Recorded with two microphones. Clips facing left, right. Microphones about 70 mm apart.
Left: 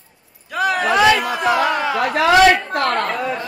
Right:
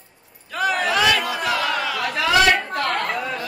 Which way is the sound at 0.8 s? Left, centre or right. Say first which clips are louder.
Left 7 dB; left.